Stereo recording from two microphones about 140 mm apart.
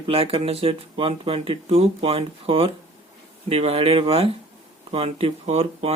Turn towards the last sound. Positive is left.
turn(degrees=-45)  # may be behind; listen again after turning